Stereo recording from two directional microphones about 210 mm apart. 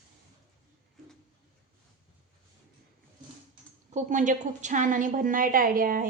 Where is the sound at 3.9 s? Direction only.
35° right (ahead or behind).